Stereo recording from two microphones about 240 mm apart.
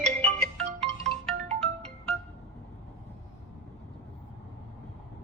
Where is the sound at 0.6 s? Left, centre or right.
Centre.